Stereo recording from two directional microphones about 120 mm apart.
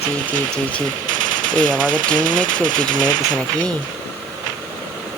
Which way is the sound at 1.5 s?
90° right.